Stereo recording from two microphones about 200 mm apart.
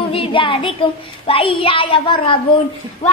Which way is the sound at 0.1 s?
25° left (ahead or behind).